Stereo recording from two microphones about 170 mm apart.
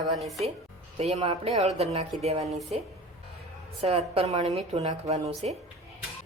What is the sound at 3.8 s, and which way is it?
A woman's voice, 40° right (ahead or behind).